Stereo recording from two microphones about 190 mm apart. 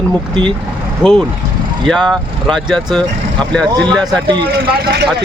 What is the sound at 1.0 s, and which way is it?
Speech, 5° right (ahead or behind).